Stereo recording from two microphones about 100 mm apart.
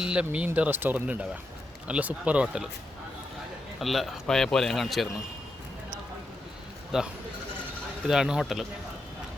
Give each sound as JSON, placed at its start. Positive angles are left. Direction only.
{"t": 0.0, "sound": "speech", "side_deg": -10}
{"t": 3.8, "sound": "speech", "side_deg": 0}
{"t": 6.9, "sound": "speech", "side_deg": -5}